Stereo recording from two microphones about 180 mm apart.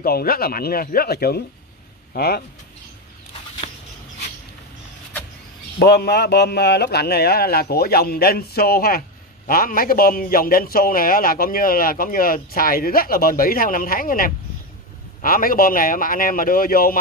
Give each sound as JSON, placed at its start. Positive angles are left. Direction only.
{"t": 0.0, "sound": "speech", "side_deg": 55}
{"t": 5.8, "sound": "a man's voice", "side_deg": 65}